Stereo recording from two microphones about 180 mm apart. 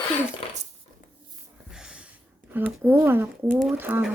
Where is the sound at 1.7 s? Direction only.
5° right (ahead or behind).